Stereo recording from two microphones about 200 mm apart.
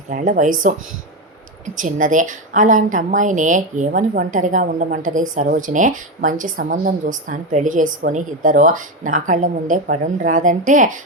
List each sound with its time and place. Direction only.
0.1 s a woman's voice: 40° right (ahead or behind)